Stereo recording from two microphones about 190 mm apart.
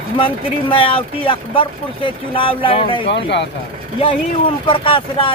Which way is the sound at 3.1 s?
65° left (ahead or behind).